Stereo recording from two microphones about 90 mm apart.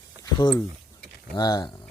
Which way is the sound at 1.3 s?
50° left (ahead or behind).